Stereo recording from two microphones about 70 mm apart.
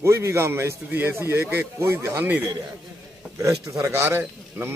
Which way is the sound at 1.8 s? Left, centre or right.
Right.